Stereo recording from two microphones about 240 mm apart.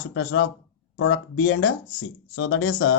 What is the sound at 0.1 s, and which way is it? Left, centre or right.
Speech, left.